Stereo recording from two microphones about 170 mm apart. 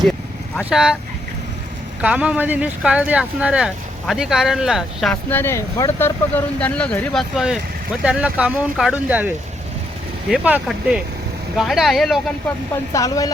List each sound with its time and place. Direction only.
0.6 s speech: 5° right (ahead or behind)
2.0 s speech: 5° right (ahead or behind)
5.3 s speech: 15° left (ahead or behind)
12.9 s speech: 20° left (ahead or behind)